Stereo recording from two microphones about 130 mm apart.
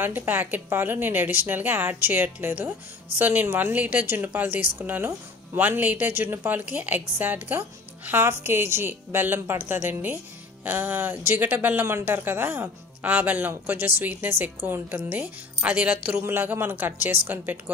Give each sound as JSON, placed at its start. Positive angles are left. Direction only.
{"t": 0.0, "sound": "a woman's voice", "side_deg": -15}